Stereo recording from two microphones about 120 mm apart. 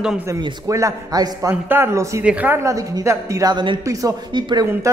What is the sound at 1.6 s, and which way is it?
Speech, 20° right (ahead or behind).